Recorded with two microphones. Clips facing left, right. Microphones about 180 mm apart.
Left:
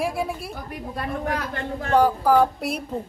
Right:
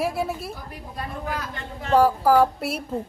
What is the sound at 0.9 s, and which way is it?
Speech, 65° left (ahead or behind).